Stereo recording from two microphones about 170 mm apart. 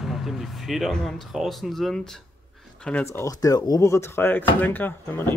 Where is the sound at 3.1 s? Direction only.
20° left (ahead or behind).